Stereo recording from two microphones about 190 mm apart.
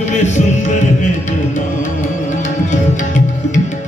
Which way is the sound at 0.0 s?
40° left (ahead or behind).